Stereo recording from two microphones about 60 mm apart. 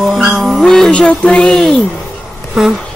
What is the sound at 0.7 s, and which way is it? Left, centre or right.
Speech, centre.